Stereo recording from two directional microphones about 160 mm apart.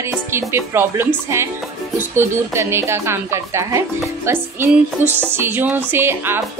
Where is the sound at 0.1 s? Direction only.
15° right (ahead or behind).